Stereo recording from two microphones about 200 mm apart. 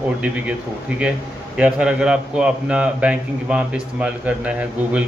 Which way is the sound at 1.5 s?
5° right (ahead or behind).